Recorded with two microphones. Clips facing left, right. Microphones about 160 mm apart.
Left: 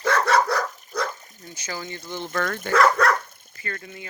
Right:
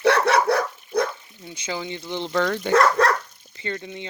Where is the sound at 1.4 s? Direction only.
15° right (ahead or behind).